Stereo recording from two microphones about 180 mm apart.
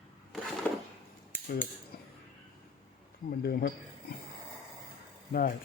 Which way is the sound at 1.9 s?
55° left (ahead or behind).